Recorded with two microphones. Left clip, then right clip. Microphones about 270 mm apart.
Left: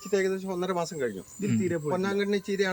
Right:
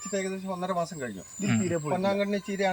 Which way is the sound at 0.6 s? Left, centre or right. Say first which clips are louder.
Right 2 dB; centre.